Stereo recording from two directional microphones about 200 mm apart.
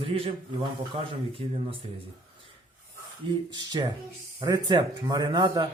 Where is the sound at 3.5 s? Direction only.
20° right (ahead or behind).